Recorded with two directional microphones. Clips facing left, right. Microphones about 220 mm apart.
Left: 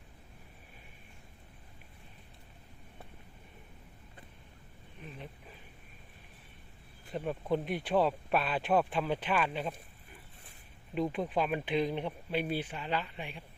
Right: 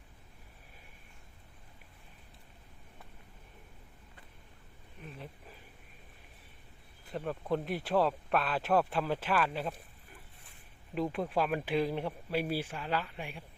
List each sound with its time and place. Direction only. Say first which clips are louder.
5.0 s a sound: even; 5° right (ahead or behind)
7.1 s speech: left 1 dB; centre (ahead or behind)
10.9 s speech: even; centre (ahead or behind)